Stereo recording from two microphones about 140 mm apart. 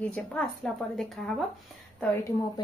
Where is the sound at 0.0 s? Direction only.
10° left (ahead or behind).